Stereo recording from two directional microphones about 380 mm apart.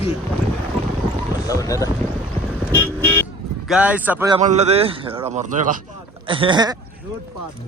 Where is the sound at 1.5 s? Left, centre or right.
Centre.